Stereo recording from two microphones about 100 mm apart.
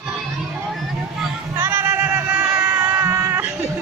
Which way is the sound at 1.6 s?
25° right (ahead or behind).